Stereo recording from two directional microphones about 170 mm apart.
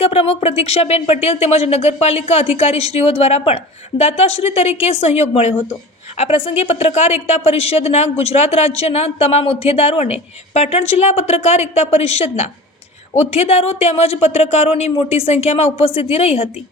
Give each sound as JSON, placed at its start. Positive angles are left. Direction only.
{"t": 0.0, "sound": "a woman's voice", "side_deg": 35}